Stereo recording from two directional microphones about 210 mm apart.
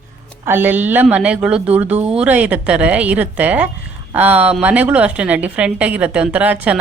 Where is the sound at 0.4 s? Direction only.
10° right (ahead or behind).